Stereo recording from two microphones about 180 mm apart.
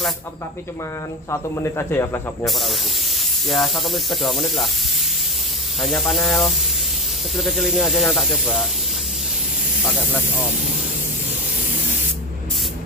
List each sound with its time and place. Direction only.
1.3 s speech: 15° left (ahead or behind)
2.4 s speech: centre (ahead or behind)
5.8 s speech: centre (ahead or behind)